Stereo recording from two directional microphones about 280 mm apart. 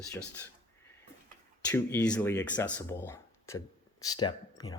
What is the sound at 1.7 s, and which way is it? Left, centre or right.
Speech, centre.